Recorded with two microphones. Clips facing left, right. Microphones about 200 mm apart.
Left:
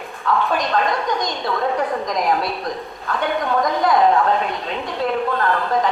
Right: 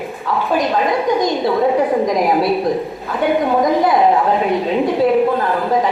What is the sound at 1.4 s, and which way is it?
A woman's voice, 25° right (ahead or behind).